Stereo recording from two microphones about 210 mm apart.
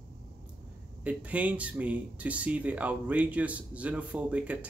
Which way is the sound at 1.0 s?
5° right (ahead or behind).